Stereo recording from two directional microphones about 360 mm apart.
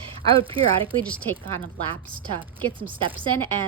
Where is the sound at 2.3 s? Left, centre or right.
Centre.